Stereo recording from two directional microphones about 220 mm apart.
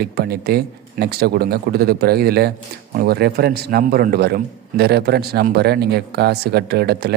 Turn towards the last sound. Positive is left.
turn(degrees=-45)  # may be behind; listen again after turning